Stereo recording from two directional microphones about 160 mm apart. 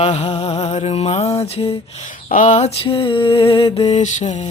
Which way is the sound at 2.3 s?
50° left (ahead or behind).